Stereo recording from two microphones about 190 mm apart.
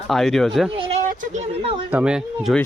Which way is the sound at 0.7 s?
30° right (ahead or behind).